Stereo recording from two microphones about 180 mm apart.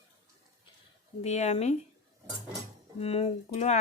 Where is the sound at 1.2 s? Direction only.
35° left (ahead or behind).